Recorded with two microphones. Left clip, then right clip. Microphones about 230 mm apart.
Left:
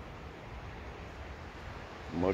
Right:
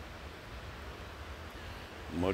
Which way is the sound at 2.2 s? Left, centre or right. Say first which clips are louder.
Left 2 dB; right.